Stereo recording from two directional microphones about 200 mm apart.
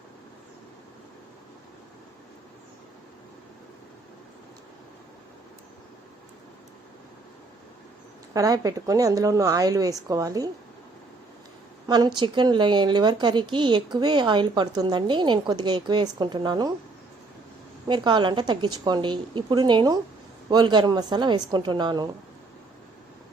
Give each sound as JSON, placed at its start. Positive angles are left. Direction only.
{"t": 8.3, "sound": "a woman's voice", "side_deg": -15}
{"t": 11.9, "sound": "speech", "side_deg": -20}
{"t": 17.8, "sound": "speech", "side_deg": -20}